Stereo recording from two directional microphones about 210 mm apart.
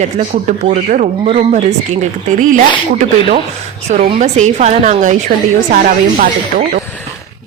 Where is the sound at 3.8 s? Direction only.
30° right (ahead or behind).